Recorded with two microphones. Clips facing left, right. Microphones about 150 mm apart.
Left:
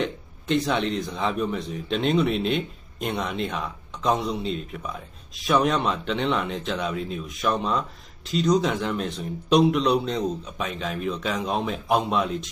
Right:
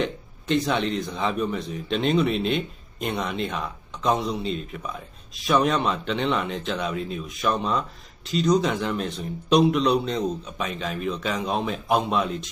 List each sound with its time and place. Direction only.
0.0 s a man's voice: centre (ahead or behind)